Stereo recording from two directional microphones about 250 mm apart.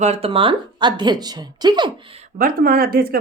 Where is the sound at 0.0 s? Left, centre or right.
Right.